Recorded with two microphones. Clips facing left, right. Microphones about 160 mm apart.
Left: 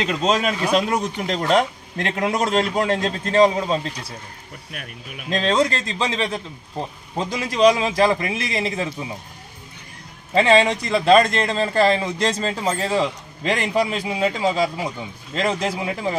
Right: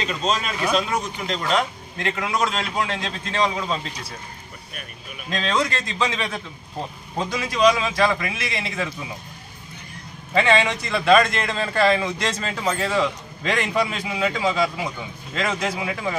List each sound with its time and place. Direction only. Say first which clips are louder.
0.1 s speech: left 5 dB; 65° left (ahead or behind); by 3.9 s 40° left (ahead or behind)
5.3 s a man's voice: left 4 dB; 30° left (ahead or behind)
10.3 s a man's voice: left 4 dB; 35° left (ahead or behind)